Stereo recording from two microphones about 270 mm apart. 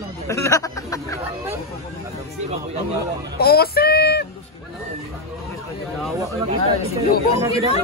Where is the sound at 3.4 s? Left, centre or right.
Left.